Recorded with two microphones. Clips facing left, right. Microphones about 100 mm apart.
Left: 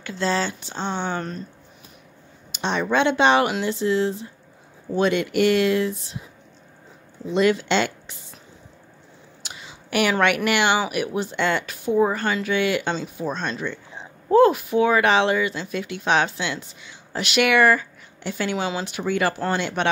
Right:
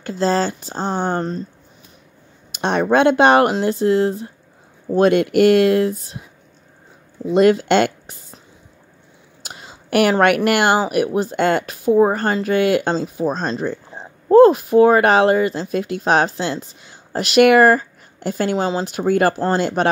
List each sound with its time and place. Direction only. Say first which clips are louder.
0.2 s speech: right 5 dB; 40° right (ahead or behind)
2.5 s speech: right 6 dB; 50° right (ahead or behind)
7.3 s speech: right 6 dB; 50° right (ahead or behind)
9.4 s a sound: right 4 dB; 45° right (ahead or behind)
10.2 s speech: right 5 dB; 50° right (ahead or behind)